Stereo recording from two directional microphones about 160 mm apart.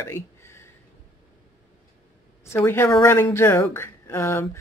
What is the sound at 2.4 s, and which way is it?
A woman's voice, 15° left (ahead or behind).